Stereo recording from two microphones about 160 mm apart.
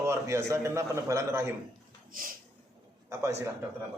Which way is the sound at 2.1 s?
60° right (ahead or behind).